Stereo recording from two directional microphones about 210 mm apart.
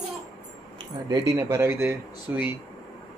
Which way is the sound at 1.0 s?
15° right (ahead or behind).